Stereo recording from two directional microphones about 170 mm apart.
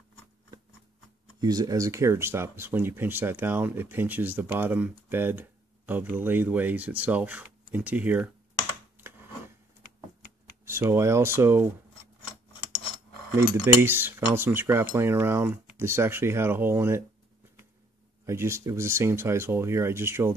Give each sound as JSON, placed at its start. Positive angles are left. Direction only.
{"t": 1.4, "sound": "speech", "side_deg": -20}
{"t": 10.6, "sound": "speech", "side_deg": -15}
{"t": 12.3, "sound": "a sound", "side_deg": 35}
{"t": 13.8, "sound": "speech", "side_deg": -15}
{"t": 18.2, "sound": "speech", "side_deg": -15}